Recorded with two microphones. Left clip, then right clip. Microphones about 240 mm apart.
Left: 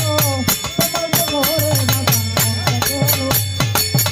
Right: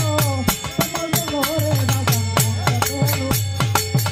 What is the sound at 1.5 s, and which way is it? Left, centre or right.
Music, left.